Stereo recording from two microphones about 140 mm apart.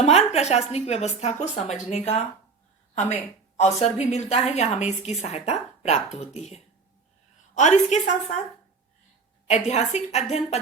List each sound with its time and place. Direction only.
0.0 s a woman's voice: 50° left (ahead or behind)
3.8 s a woman's voice: 50° left (ahead or behind)
9.5 s a woman's voice: 55° left (ahead or behind)